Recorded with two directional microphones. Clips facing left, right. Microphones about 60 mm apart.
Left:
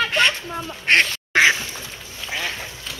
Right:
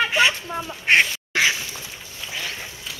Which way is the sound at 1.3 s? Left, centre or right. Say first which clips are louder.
Left 5 dB; left.